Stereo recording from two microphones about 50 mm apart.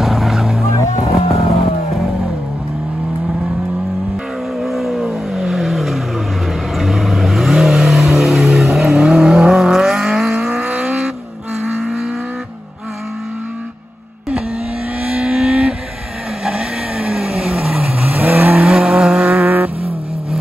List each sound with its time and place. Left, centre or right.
0.0 s vehicle: centre
4.6 s vehicle: centre
8.5 s vehicle: centre
8.7 s vehicle: centre; by 11.0 s right
15.2 s vehicle: centre
18.2 s vehicle: right
18.6 s vehicle: centre
19.4 s vehicle: right